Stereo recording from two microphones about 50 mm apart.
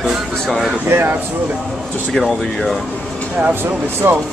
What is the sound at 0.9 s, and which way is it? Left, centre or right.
Speech, right.